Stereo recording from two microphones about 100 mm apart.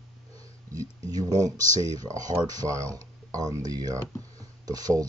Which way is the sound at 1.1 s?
40° right (ahead or behind).